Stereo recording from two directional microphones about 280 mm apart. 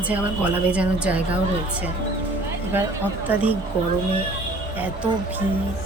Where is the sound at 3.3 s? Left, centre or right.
Centre.